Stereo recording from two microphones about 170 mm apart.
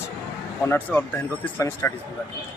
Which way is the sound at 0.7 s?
10° left (ahead or behind).